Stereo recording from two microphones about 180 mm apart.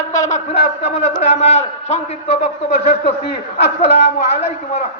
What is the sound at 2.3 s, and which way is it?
Speech, 65° left (ahead or behind).